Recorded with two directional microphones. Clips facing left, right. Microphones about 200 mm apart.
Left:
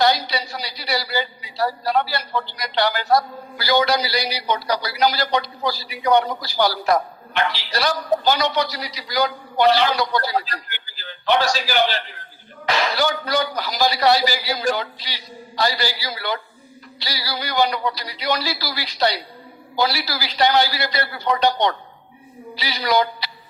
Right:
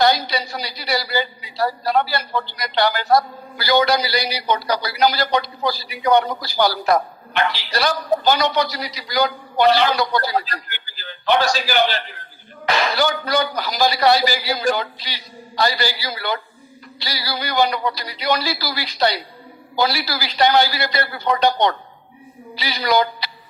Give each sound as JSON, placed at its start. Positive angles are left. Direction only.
{"t": 0.0, "sound": "a man's voice", "side_deg": -50}